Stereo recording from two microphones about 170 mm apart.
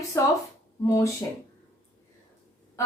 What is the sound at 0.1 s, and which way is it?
Speech, 15° left (ahead or behind).